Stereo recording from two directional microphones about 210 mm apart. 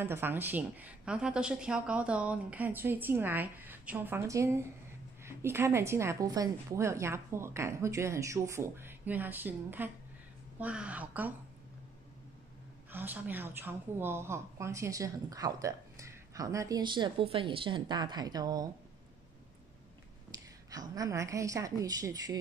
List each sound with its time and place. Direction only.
0.0 s a woman's voice: 10° right (ahead or behind)
12.9 s a woman's voice: 10° right (ahead or behind)
20.2 s a woman's voice: 15° right (ahead or behind)